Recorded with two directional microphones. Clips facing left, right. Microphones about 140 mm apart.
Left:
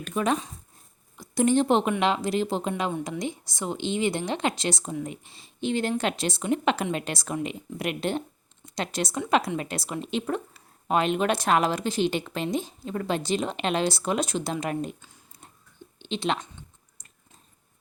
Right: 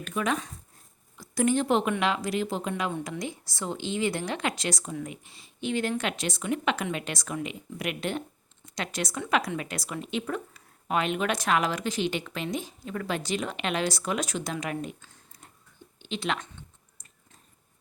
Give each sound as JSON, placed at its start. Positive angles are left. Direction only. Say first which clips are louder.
{"t": 0.0, "sound": "a woman's voice", "louder": "left 3 dB", "side_deg": 30}
{"t": 15.0, "sound": "a sound", "louder": "left 2 dB", "side_deg": 15}
{"t": 16.0, "sound": "speech", "louder": "left 3 dB", "side_deg": 25}